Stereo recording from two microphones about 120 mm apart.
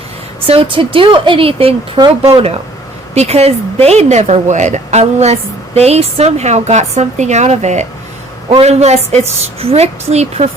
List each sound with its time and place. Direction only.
0.4 s a woman's voice: 50° right (ahead or behind)
2.0 s speech: 35° right (ahead or behind)
3.2 s a woman's voice: 60° right (ahead or behind)
8.4 s a woman's voice: 60° right (ahead or behind)